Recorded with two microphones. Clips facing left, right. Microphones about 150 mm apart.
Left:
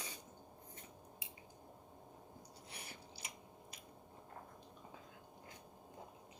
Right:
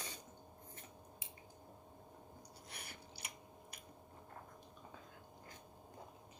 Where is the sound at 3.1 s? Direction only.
65° right (ahead or behind).